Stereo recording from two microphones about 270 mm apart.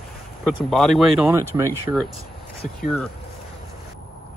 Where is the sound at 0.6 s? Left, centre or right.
Centre.